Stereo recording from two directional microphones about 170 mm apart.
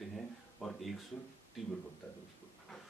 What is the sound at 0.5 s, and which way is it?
Speech, 5° left (ahead or behind).